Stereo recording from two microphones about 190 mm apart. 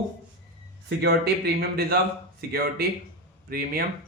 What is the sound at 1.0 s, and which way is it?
A man's voice, 55° right (ahead or behind).